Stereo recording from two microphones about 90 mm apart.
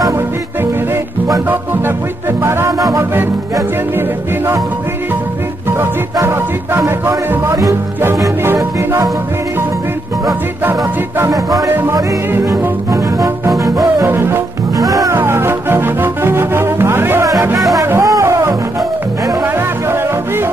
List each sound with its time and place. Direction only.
2.4 s music: 30° right (ahead or behind)
6.2 s music: 30° right (ahead or behind)
11.1 s music: 40° right (ahead or behind)
11.7 s music: 25° right (ahead or behind)
15.1 s music: 25° right (ahead or behind)